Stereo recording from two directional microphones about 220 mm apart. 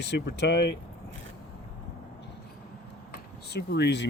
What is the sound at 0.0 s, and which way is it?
Speech, 50° left (ahead or behind).